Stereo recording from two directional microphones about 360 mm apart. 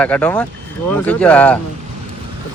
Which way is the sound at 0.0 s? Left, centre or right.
Centre.